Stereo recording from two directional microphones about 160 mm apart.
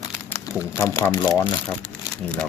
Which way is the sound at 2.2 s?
5° left (ahead or behind).